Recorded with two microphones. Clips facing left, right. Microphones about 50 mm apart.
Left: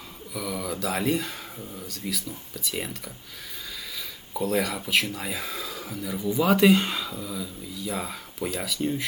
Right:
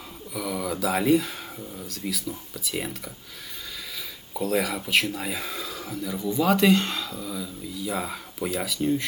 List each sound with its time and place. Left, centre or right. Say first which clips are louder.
0.3 s speech: right 2 dB; centre
4.4 s speech: even; centre